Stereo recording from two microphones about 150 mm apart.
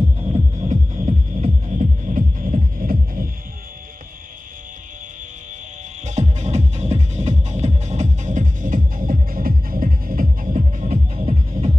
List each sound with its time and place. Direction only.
0.7 s music: 50° right (ahead or behind); by 3.3 s 70° right (ahead or behind)
6.0 s music: 50° right (ahead or behind)
11.1 s music: 40° right (ahead or behind)